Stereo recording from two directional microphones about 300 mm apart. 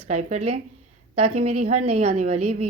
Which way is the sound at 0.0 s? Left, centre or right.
Right.